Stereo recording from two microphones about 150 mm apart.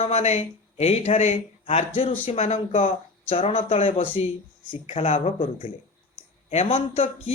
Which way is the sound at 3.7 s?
55° left (ahead or behind).